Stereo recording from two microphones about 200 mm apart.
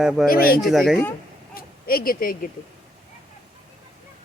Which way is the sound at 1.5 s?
45° left (ahead or behind).